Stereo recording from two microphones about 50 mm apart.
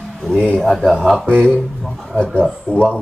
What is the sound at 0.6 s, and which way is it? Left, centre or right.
Speech, centre.